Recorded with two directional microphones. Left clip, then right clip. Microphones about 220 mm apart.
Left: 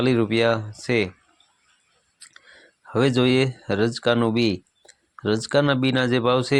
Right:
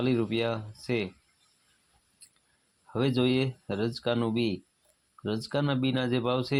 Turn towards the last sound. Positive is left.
turn(degrees=25)  # may be behind; listen again after turning